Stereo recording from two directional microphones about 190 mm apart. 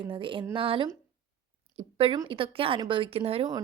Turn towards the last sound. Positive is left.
turn(degrees=-30)  # may be behind; listen again after turning